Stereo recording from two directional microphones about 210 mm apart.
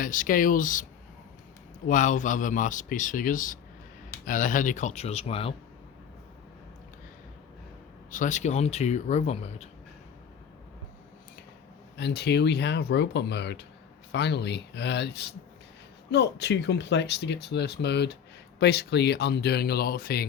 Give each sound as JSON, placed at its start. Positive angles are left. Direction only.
{"t": 0.0, "sound": "speech", "side_deg": 40}
{"t": 1.9, "sound": "speech", "side_deg": 35}
{"t": 8.1, "sound": "speech", "side_deg": 35}
{"t": 11.9, "sound": "speech", "side_deg": 50}